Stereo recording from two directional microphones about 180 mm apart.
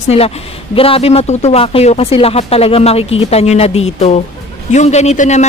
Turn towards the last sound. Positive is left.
turn(degrees=40)  # may be behind; listen again after turning